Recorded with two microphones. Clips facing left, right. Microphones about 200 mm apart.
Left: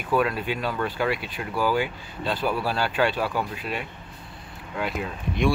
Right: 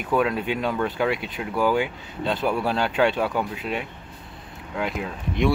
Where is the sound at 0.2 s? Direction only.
20° right (ahead or behind).